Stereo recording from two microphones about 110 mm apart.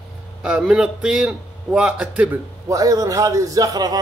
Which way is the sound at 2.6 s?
30° right (ahead or behind).